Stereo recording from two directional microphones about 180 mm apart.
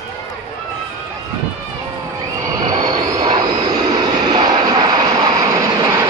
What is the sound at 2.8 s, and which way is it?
Train, 20° right (ahead or behind).